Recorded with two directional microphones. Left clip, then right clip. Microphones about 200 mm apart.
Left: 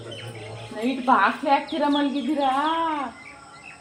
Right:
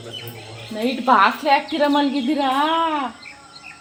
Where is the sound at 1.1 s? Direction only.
65° right (ahead or behind).